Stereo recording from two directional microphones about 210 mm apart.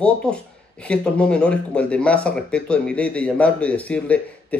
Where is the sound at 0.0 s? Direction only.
5° left (ahead or behind).